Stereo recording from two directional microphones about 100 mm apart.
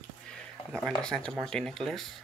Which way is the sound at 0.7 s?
5° left (ahead or behind).